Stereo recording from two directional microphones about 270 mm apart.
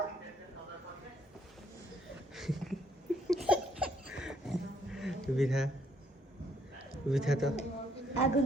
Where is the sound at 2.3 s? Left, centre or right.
Centre.